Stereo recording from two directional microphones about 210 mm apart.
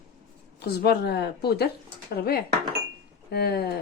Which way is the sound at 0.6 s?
50° left (ahead or behind).